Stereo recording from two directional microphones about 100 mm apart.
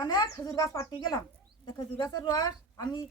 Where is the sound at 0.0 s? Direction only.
40° left (ahead or behind).